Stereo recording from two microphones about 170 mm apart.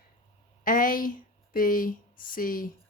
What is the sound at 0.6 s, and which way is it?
Speech, 55° left (ahead or behind).